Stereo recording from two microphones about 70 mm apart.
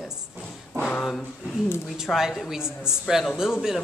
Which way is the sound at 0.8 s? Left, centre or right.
Centre.